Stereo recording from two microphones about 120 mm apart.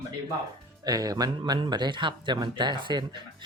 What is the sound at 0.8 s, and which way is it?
Speech, 30° right (ahead or behind).